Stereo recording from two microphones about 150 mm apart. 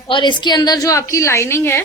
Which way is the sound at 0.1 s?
30° left (ahead or behind).